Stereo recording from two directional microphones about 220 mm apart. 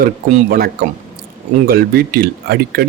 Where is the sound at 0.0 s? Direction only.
40° right (ahead or behind).